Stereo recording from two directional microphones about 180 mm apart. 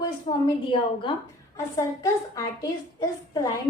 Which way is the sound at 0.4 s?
25° left (ahead or behind).